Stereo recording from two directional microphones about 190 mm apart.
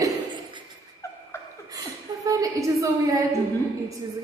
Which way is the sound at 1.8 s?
20° right (ahead or behind).